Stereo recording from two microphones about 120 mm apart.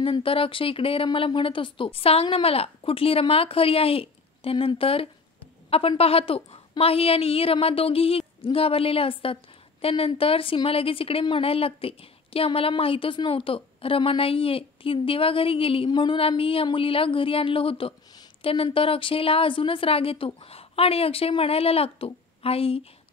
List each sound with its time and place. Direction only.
0.0 s a woman's voice: 50° left (ahead or behind)